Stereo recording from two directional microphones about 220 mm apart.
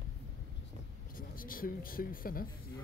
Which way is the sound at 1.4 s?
40° left (ahead or behind).